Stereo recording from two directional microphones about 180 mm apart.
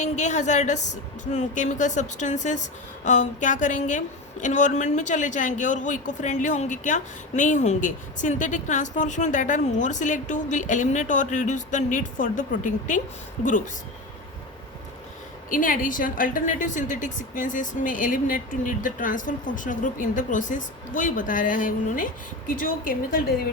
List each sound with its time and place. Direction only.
0.0 s a woman's voice: 40° left (ahead or behind)
15.4 s a woman's voice: 50° left (ahead or behind)